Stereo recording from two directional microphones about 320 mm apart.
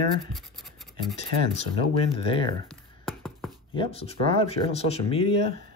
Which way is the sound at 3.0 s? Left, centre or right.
Centre.